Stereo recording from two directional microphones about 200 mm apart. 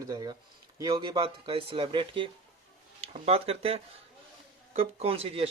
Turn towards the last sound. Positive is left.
turn(degrees=-30)  # may be behind; listen again after turning